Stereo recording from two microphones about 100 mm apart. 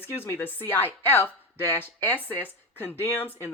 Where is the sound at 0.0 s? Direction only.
25° left (ahead or behind).